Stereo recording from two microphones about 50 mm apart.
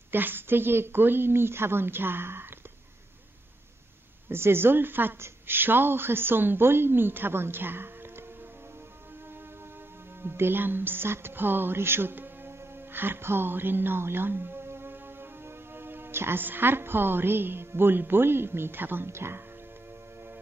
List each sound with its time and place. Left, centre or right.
0.1 s a woman's voice: right
4.3 s a woman's voice: right
10.2 s music: right
19.1 s speech: right